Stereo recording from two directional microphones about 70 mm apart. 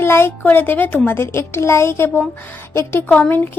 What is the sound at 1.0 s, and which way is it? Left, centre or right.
Speech, left.